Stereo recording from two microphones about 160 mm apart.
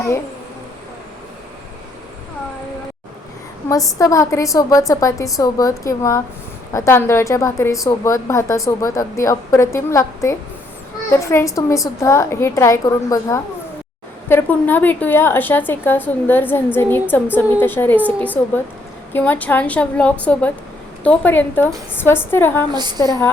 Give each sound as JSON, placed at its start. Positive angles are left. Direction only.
{"t": 3.7, "sound": "a woman's voice", "side_deg": 20}
{"t": 22.7, "sound": "a woman's voice", "side_deg": -25}